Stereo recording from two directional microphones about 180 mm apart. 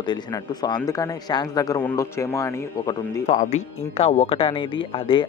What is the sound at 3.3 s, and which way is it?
Speech, 40° left (ahead or behind).